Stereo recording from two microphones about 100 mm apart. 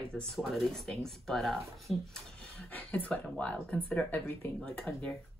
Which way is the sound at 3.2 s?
10° left (ahead or behind).